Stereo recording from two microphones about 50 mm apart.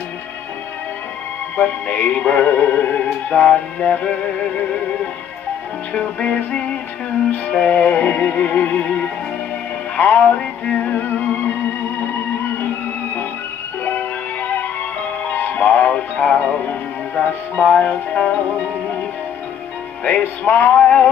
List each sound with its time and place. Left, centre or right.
1.6 s music: left
3.0 s music: left
5.9 s music: left
10.2 s music: left
13.8 s music: left
15.2 s speech: left
20.1 s music: left
20.8 s music: left